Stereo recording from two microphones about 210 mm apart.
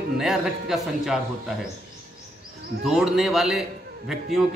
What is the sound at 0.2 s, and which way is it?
A man's voice, centre (ahead or behind).